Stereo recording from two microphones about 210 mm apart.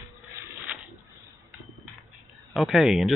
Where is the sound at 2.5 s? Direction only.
Centre (ahead or behind).